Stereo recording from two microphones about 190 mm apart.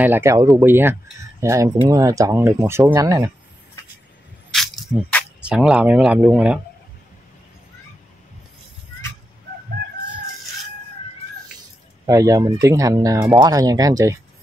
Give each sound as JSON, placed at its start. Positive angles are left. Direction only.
{"t": 0.0, "sound": "speech", "side_deg": -10}
{"t": 4.5, "sound": "speech", "side_deg": 0}
{"t": 12.1, "sound": "speech", "side_deg": -15}